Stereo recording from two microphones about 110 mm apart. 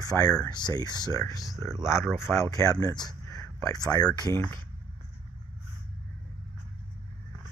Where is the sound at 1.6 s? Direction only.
20° left (ahead or behind).